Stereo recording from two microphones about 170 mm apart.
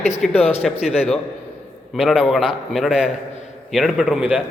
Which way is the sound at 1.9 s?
5° right (ahead or behind).